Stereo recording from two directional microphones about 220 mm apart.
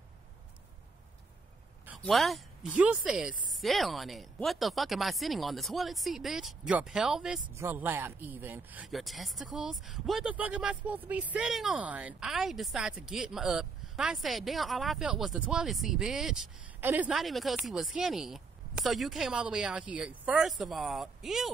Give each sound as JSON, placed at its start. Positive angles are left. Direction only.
{"t": 1.9, "sound": "speech", "side_deg": 0}